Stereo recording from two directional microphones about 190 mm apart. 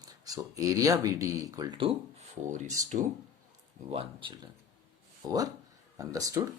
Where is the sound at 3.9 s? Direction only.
30° right (ahead or behind).